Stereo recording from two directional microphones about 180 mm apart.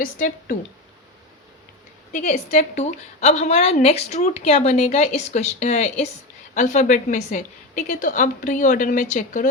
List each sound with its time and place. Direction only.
0.0 s a woman's voice: 50° left (ahead or behind)
2.5 s a woman's voice: 40° left (ahead or behind)